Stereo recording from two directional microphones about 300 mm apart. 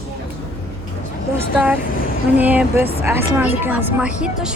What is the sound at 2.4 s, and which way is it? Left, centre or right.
A woman's voice, centre.